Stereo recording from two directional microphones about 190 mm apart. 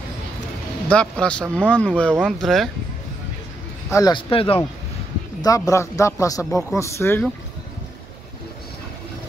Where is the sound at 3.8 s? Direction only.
20° left (ahead or behind).